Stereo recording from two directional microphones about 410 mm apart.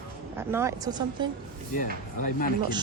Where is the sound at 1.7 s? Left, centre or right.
Centre.